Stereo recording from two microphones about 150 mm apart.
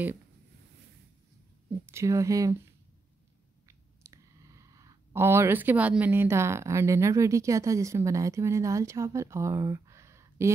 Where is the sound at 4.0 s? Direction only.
20° right (ahead or behind).